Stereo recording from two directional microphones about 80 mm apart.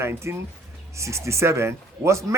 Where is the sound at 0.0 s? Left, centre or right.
Right.